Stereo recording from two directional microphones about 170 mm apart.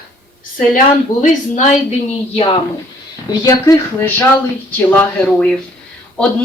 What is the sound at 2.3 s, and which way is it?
Speech, 35° left (ahead or behind).